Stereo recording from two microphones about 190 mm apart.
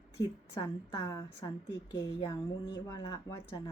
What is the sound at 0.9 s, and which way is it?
A woman's voice, 20° left (ahead or behind).